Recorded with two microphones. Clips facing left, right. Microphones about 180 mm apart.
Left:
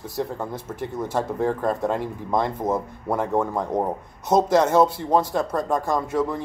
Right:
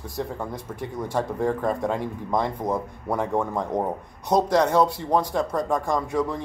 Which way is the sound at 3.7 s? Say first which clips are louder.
Left 2 dB; 20° right (ahead or behind).